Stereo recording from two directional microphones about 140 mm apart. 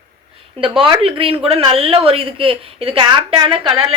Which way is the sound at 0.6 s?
40° right (ahead or behind).